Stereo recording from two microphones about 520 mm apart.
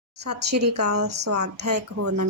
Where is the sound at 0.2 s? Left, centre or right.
Right.